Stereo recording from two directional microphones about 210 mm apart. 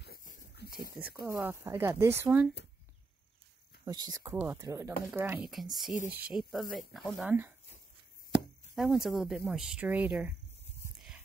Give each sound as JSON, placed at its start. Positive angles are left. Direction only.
{"t": 0.0, "sound": "a sound", "side_deg": 40}
{"t": 1.2, "sound": "speech", "side_deg": -10}
{"t": 3.8, "sound": "speech", "side_deg": -20}
{"t": 8.7, "sound": "speech", "side_deg": 0}